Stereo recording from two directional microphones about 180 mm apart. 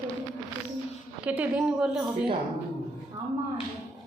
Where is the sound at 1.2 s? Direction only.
10° right (ahead or behind).